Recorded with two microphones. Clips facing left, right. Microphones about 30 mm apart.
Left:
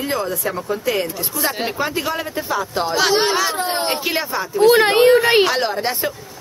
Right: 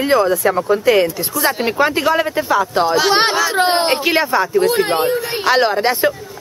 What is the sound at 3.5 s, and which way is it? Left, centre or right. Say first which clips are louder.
Speech: right 7 dB; right.